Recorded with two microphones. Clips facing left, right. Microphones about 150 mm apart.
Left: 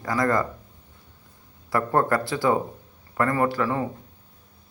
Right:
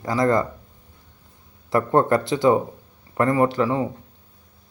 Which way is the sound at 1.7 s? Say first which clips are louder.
Right 4 dB; 25° right (ahead or behind).